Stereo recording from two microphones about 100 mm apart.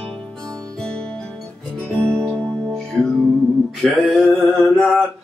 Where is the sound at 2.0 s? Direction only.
25° right (ahead or behind).